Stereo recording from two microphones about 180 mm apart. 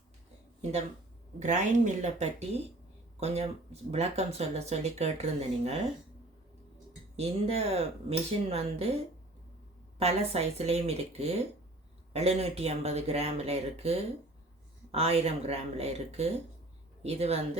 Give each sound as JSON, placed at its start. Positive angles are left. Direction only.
{"t": 1.4, "sound": "speech", "side_deg": -40}
{"t": 7.2, "sound": "speech", "side_deg": -35}
{"t": 10.0, "sound": "speech", "side_deg": -35}